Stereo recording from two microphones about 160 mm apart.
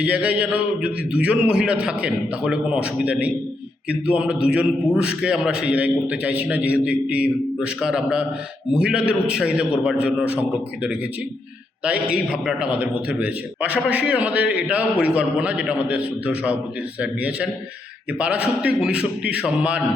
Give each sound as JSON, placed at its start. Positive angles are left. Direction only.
{"t": 0.0, "sound": "a man's voice", "side_deg": -10}
{"t": 11.8, "sound": "a man's voice", "side_deg": -5}